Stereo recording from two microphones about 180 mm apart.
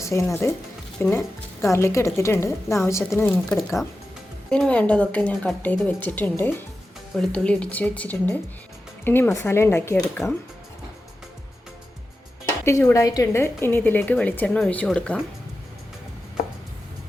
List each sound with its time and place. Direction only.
0.0 s a woman's voice: 15° left (ahead or behind)
12.5 s a woman's voice: 15° left (ahead or behind)